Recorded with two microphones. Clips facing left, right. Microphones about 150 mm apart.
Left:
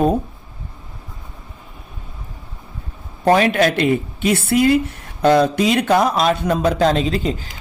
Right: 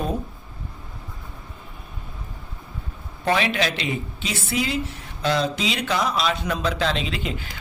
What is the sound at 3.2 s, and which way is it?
Speech, 45° left (ahead or behind).